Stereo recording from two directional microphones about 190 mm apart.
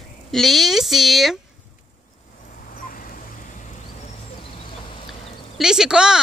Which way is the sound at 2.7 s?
45° left (ahead or behind).